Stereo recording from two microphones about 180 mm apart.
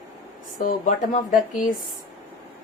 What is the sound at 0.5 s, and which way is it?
Speech, 45° left (ahead or behind).